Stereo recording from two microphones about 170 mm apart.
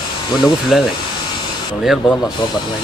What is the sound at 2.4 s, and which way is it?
Speech, 30° left (ahead or behind).